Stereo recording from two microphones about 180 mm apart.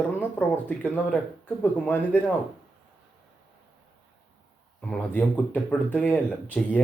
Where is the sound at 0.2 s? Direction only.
10° left (ahead or behind).